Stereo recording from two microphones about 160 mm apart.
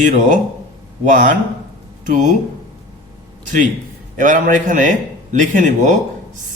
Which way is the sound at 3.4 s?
55° right (ahead or behind).